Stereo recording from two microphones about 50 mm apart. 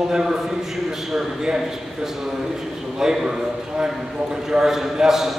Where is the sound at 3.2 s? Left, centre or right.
Centre.